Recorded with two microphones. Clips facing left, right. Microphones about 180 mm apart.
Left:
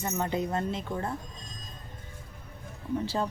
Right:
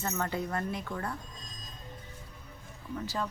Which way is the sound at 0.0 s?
20° left (ahead or behind).